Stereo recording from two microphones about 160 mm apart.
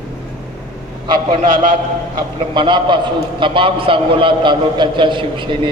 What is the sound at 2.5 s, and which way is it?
A man's voice, 30° right (ahead or behind).